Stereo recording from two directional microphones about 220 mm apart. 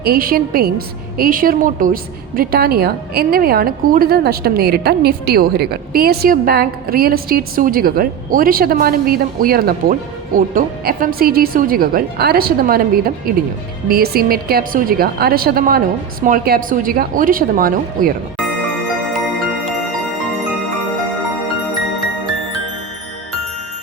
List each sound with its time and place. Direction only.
0.0 s a woman's voice: 40° right (ahead or behind)